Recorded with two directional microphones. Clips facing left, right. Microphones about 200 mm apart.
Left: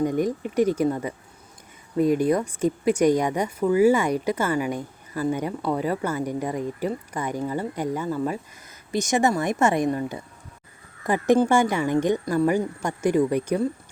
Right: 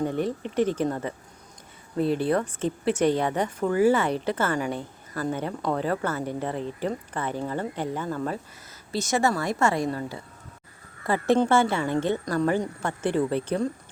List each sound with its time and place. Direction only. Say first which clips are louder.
0.0 s speech: left 3 dB; 10° left (ahead or behind)